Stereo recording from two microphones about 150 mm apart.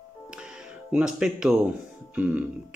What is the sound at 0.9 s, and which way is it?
Speech, 5° right (ahead or behind).